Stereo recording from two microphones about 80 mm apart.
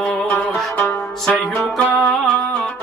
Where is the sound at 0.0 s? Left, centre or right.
Centre.